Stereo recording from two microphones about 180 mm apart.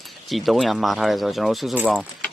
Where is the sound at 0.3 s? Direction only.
Centre (ahead or behind).